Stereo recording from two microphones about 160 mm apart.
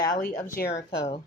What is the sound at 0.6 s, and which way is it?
Speech, 70° left (ahead or behind).